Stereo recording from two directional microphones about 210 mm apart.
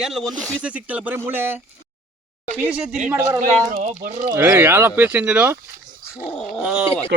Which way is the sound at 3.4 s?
40° right (ahead or behind).